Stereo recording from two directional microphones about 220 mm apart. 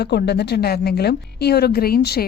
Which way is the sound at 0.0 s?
50° left (ahead or behind).